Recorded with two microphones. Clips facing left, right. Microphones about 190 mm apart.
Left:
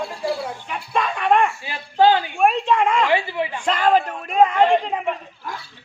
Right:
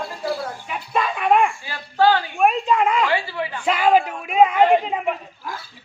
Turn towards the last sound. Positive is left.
turn(degrees=-5)  # may be behind; listen again after turning